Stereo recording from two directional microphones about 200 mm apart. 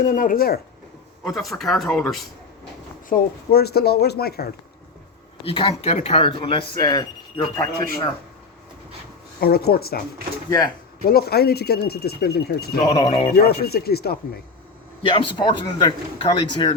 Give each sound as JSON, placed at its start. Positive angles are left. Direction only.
{"t": 0.0, "sound": "speech", "side_deg": 40}
{"t": 1.4, "sound": "speech", "side_deg": 0}
{"t": 3.1, "sound": "speech", "side_deg": 50}
{"t": 5.4, "sound": "speech", "side_deg": 30}
{"t": 9.4, "sound": "speech", "side_deg": 50}
{"t": 11.0, "sound": "speech", "side_deg": 50}
{"t": 12.8, "sound": "speech", "side_deg": 25}
{"t": 13.3, "sound": "speech", "side_deg": 50}
{"t": 15.0, "sound": "speech", "side_deg": 25}